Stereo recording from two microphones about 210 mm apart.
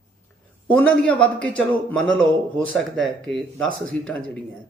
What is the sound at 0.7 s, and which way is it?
A man's voice, 5° left (ahead or behind).